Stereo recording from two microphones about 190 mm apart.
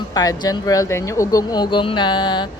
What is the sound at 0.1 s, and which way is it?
A woman's voice, 20° left (ahead or behind).